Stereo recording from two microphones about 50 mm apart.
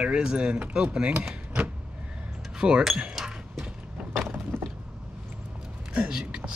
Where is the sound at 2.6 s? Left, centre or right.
Centre.